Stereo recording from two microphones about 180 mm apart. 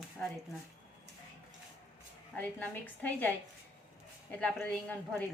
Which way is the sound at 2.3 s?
10° left (ahead or behind).